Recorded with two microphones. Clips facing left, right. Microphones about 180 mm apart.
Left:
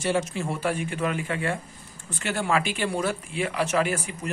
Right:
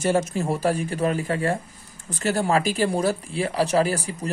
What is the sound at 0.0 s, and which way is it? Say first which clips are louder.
Speech: right 4 dB; 45° right (ahead or behind).